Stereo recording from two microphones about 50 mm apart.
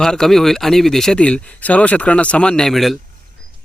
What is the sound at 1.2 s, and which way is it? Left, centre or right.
Speech, left.